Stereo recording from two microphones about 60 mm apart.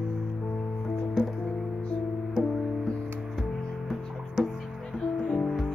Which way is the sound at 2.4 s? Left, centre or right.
Centre.